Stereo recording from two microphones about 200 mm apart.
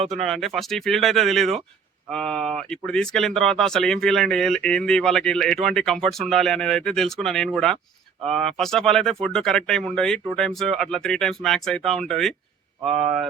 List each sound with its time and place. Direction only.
0.1 s speech: centre (ahead or behind)